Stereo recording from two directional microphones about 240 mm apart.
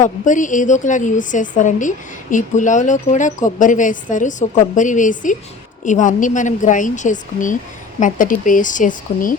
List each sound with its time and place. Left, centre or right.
0.0 s a woman's voice: left